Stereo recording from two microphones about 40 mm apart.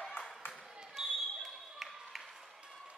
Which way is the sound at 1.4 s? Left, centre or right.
Centre.